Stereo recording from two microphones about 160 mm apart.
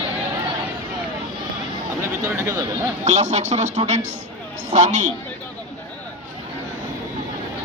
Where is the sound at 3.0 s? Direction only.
45° right (ahead or behind).